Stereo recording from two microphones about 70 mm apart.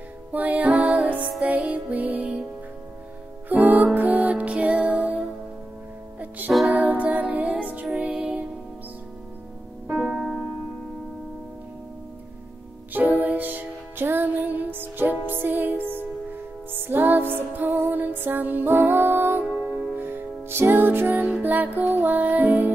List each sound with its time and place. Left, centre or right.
0.3 s music: right
3.4 s music: right
9.8 s piano: centre
10.1 s music: centre
13.2 s music: right